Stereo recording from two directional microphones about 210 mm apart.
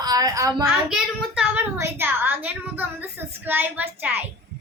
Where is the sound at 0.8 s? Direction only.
5° right (ahead or behind).